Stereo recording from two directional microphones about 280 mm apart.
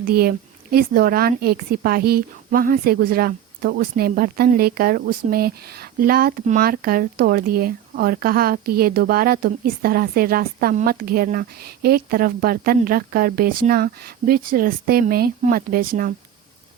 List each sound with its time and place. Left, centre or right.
0.0 s speech: right